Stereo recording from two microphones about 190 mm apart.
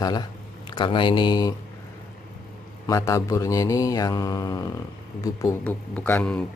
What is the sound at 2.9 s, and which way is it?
Mantra, 15° left (ahead or behind).